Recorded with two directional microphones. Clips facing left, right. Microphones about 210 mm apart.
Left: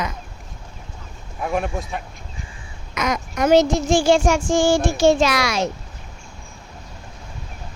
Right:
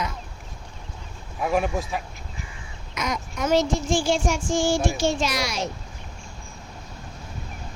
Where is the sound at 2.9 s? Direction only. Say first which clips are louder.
Left 6 dB; 85° left.